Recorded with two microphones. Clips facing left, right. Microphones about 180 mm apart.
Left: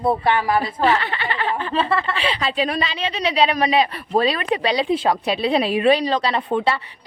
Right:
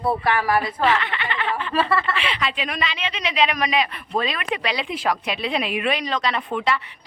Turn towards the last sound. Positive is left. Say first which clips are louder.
# left 3 dB
turn(degrees=30)  # may be behind; listen again after turning